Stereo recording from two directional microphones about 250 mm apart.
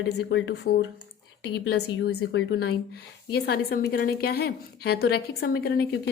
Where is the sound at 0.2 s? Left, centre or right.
Left.